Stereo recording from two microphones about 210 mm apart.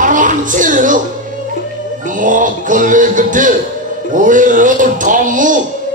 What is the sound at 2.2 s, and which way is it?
Speech, 40° right (ahead or behind).